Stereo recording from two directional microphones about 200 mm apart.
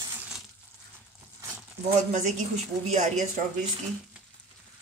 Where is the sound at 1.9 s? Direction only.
35° right (ahead or behind).